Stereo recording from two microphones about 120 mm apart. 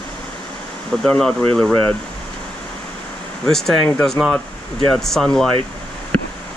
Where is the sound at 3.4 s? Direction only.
5° left (ahead or behind).